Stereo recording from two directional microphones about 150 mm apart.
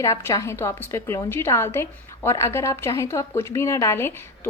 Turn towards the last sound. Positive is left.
turn(degrees=15)  # may be behind; listen again after turning